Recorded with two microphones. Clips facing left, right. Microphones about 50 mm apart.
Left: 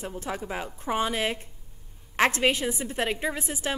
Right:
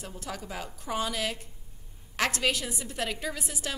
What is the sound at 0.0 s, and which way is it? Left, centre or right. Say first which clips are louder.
A woman's voice: left 6 dB; left.